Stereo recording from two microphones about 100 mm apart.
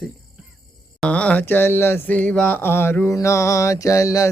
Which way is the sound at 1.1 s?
15° left (ahead or behind).